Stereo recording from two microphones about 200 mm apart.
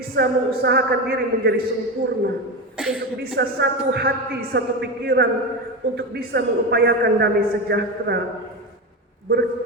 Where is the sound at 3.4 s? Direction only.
55° right (ahead or behind).